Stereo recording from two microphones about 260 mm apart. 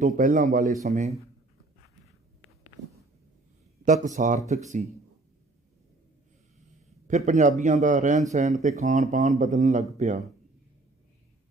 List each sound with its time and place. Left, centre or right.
0.0 s a man's voice: right
3.8 s a man's voice: right
7.1 s a man's voice: right